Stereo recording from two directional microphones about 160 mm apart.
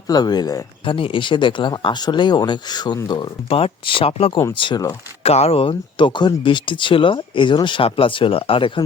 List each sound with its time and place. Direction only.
0.1 s speech: 25° left (ahead or behind)